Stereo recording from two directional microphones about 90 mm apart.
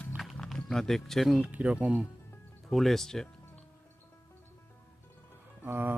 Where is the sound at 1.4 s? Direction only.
15° right (ahead or behind).